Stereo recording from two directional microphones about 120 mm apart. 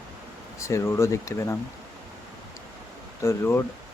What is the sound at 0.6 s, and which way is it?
Speech, 25° left (ahead or behind).